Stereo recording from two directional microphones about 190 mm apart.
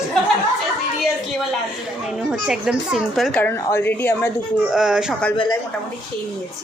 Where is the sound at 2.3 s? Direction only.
5° right (ahead or behind).